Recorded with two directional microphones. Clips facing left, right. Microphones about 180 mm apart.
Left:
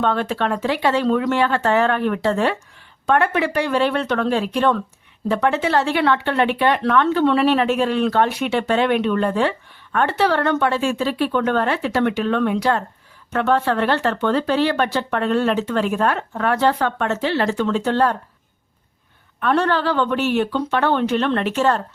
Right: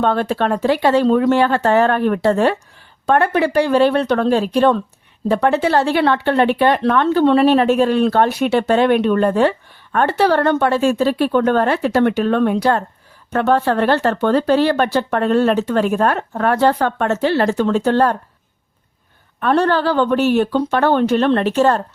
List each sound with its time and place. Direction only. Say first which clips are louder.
0.0 s speech: right 3 dB; 40° right (ahead or behind)
19.4 s speech: right 3 dB; 35° right (ahead or behind)